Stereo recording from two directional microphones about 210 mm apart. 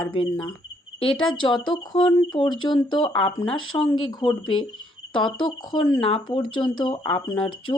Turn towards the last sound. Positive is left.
turn(degrees=25)  # may be behind; listen again after turning